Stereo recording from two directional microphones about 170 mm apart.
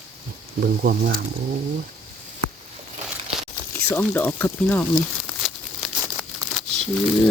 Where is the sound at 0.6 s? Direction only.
65° right (ahead or behind).